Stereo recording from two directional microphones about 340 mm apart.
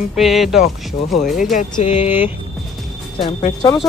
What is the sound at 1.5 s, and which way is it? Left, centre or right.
Speech, centre.